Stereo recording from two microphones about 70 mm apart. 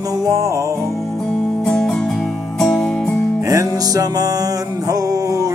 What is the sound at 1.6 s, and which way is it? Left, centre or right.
Music, centre.